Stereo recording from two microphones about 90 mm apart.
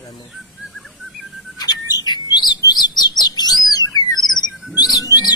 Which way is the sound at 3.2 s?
50° left (ahead or behind).